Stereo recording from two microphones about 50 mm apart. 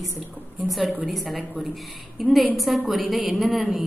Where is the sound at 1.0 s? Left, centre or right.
Centre.